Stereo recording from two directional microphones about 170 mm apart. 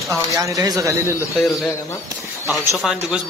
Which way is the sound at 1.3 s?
Centre (ahead or behind).